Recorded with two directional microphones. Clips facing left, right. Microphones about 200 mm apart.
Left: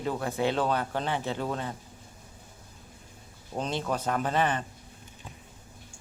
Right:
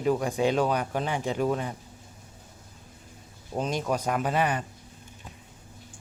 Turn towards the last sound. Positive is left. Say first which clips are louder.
# right 1 dB
turn(degrees=-10)  # may be behind; listen again after turning